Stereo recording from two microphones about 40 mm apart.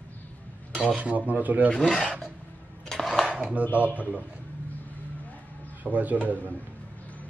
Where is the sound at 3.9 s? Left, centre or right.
Right.